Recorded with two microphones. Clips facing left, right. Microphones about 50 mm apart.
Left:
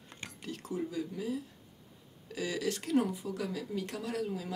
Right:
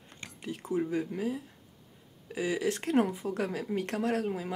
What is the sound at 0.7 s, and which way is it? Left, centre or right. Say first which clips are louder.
Speech: right 6 dB; right.